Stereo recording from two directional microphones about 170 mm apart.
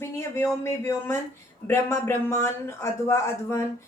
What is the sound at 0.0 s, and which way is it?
A woman's voice, 15° left (ahead or behind).